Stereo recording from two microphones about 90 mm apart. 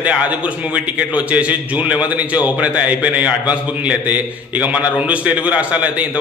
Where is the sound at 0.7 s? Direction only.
15° right (ahead or behind).